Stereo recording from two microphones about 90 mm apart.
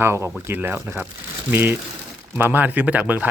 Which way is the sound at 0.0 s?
30° right (ahead or behind).